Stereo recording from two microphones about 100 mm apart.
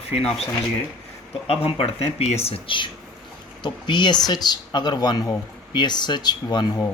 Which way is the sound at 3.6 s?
50° left (ahead or behind).